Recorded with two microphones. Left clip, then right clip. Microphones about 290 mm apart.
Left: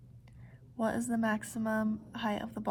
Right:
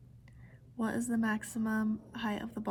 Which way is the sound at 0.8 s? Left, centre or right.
Centre.